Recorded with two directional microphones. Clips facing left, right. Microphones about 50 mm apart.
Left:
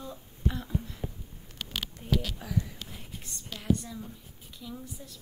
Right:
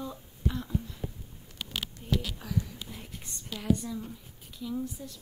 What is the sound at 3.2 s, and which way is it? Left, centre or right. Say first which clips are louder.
Speech: right 1 dB; centre.